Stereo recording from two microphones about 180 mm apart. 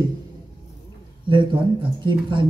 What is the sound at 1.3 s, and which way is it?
A woman's voice, 25° right (ahead or behind).